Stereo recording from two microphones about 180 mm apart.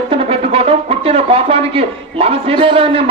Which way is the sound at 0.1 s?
30° right (ahead or behind).